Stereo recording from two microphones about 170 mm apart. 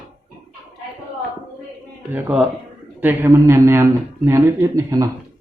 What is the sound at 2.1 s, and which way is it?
Speech, 10° right (ahead or behind).